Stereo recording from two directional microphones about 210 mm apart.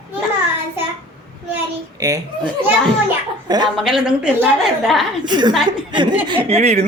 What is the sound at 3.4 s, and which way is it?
Speech, 20° right (ahead or behind).